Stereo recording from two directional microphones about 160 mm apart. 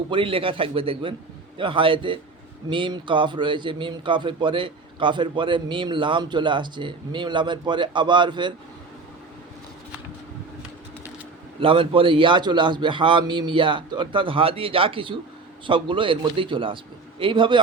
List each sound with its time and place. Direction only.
0.1 s a man's voice: 35° right (ahead or behind)
11.6 s a man's voice: 35° right (ahead or behind)